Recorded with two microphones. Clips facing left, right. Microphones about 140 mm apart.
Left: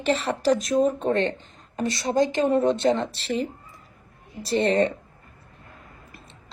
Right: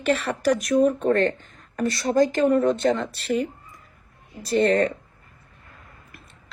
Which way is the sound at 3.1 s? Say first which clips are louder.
Right 3 dB; 55° right (ahead or behind).